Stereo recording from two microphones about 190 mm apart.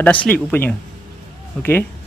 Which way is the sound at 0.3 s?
10° left (ahead or behind).